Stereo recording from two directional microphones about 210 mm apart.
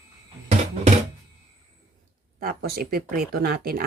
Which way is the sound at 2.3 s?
45° right (ahead or behind).